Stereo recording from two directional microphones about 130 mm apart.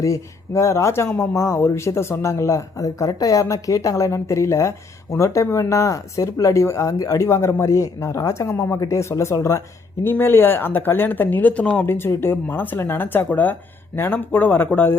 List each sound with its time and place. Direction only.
0.0 s speech: 25° left (ahead or behind)